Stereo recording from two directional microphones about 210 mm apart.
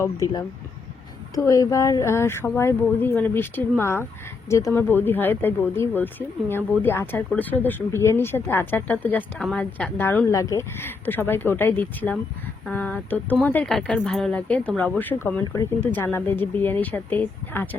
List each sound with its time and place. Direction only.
0.0 s speech: 15° left (ahead or behind)